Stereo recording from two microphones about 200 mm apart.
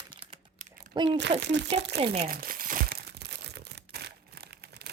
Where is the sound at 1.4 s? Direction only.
60° right (ahead or behind).